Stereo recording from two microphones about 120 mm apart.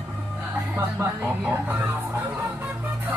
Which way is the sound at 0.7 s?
20° right (ahead or behind).